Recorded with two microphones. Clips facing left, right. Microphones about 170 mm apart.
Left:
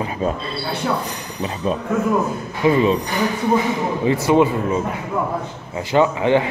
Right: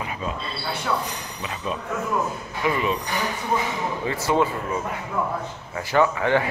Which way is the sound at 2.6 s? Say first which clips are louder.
Left 8 dB; 30° left (ahead or behind).